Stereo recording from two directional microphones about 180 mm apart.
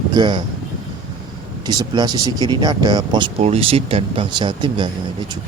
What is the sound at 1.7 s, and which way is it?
Speech, 20° right (ahead or behind).